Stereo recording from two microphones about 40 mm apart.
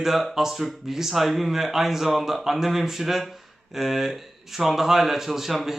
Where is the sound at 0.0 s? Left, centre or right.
Centre.